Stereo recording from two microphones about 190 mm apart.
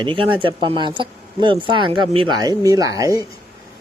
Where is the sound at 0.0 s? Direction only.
25° right (ahead or behind).